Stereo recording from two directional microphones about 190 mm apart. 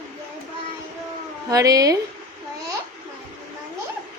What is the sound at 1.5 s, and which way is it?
Speech, 20° right (ahead or behind).